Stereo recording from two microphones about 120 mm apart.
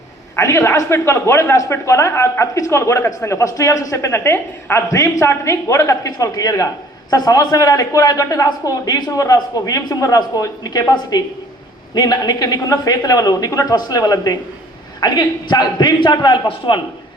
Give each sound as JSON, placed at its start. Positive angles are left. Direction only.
{"t": 0.3, "sound": "a man's voice", "side_deg": 25}